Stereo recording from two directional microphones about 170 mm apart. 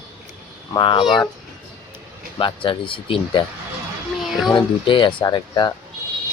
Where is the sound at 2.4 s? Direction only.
30° left (ahead or behind).